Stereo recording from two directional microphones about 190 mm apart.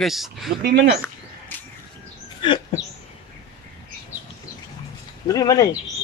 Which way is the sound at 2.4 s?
25° left (ahead or behind).